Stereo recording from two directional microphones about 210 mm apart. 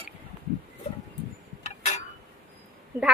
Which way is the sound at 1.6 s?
35° left (ahead or behind).